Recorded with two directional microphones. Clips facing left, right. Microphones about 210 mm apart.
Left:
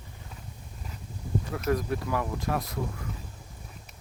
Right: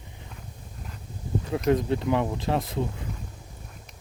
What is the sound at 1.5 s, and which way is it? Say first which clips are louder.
Speech: right 6 dB; 25° right (ahead or behind).